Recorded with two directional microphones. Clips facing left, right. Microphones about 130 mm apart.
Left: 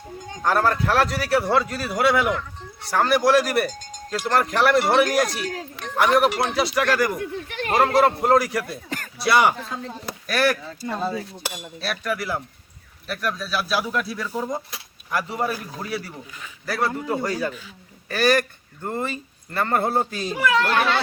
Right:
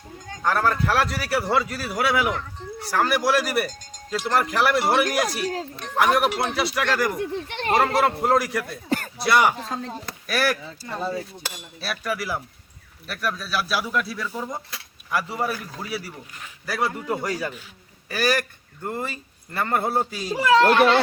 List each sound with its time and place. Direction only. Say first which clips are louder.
0.4 s speech: left 1 dB; centre (ahead or behind)
7.2 s speech: right 1 dB; 30° right (ahead or behind)
7.9 s speech: left 3 dB; centre (ahead or behind)
9.6 s speech: right 2 dB; 40° right (ahead or behind)
10.2 s speech: left 2 dB; 5° right (ahead or behind)
10.8 s speech: left 2 dB; 20° left (ahead or behind)
11.4 s cutlery: left 3 dB; 15° left (ahead or behind)
11.8 s speech: left 1 dB; 5° right (ahead or behind)
16.6 s speech: left 1 dB; 10° right (ahead or behind)
20.3 s speech: right 4 dB; 30° right (ahead or behind)